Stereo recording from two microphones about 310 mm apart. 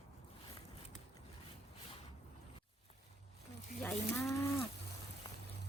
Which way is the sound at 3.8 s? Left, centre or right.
Centre.